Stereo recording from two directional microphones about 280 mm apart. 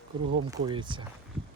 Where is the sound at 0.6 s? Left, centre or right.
Centre.